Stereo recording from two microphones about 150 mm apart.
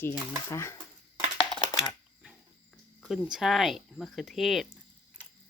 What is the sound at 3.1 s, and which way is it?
Speech, 5° right (ahead or behind).